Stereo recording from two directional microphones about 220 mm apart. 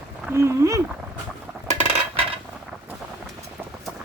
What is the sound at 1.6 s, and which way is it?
Cutlery, 30° right (ahead or behind).